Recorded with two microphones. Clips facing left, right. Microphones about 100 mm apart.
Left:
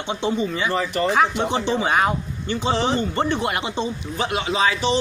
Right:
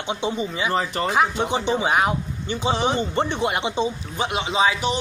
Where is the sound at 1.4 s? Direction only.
15° right (ahead or behind).